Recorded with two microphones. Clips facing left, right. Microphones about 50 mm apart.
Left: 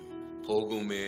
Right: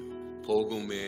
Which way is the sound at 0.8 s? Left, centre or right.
Centre.